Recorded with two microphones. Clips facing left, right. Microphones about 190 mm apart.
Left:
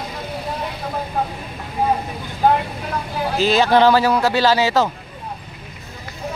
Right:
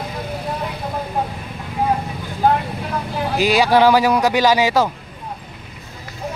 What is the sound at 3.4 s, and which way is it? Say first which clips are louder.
Speech: even; 10° right (ahead or behind).